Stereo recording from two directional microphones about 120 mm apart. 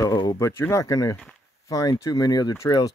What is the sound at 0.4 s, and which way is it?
Speech, 20° left (ahead or behind).